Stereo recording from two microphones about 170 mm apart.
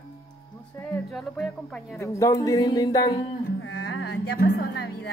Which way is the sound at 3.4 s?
90° left.